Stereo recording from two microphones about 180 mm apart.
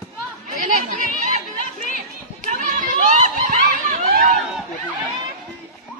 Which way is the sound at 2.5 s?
45° right (ahead or behind).